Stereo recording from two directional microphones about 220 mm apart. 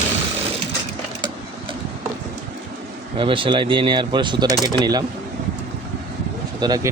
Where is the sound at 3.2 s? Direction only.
25° right (ahead or behind).